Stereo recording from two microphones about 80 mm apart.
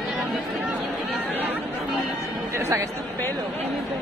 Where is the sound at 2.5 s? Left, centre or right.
Right.